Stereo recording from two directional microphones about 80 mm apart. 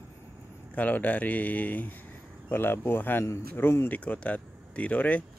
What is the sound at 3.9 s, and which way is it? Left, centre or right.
Speech, centre.